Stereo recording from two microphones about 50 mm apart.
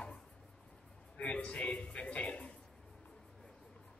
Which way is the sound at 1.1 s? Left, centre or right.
Left.